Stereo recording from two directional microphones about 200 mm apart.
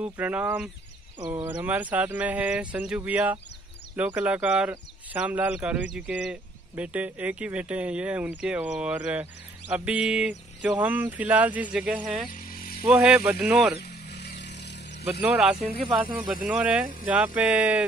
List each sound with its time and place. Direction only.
0.0 s speech: 10° right (ahead or behind)
12.3 s electric toothbrush: 45° left (ahead or behind)
12.8 s speech: 5° right (ahead or behind)
13.7 s vehicle: 55° left (ahead or behind)
15.0 s speech: 5° right (ahead or behind)
15.6 s speech: 25° right (ahead or behind)
16.4 s speech: 5° right (ahead or behind)